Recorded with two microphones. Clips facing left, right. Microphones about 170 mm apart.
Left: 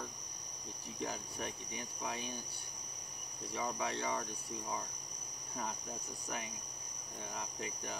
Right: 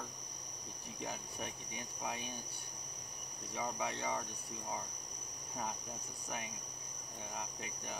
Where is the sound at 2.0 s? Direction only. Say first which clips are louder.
Left 1 dB; 15° right (ahead or behind).